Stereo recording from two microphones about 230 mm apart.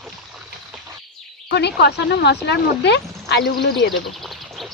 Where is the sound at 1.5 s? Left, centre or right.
Left.